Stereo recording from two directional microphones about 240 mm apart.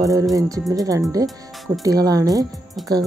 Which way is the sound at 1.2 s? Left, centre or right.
Centre.